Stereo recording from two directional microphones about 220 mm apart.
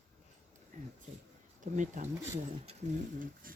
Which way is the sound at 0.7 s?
35° right (ahead or behind).